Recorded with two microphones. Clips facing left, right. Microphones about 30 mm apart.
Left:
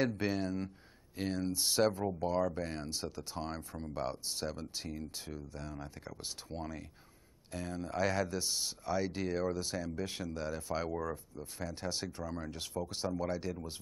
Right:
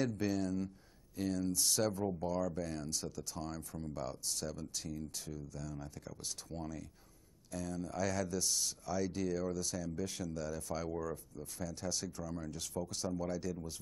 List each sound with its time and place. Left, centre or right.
0.2 s speech: left